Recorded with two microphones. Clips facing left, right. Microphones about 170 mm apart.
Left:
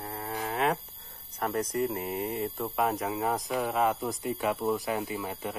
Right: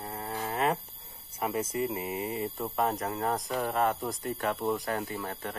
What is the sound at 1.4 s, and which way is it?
Speech, 5° right (ahead or behind).